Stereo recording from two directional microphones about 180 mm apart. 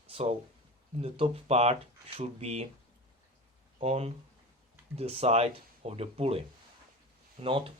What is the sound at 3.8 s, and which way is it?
Speech, 35° right (ahead or behind).